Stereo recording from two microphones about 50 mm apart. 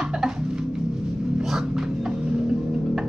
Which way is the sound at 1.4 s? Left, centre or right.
Centre.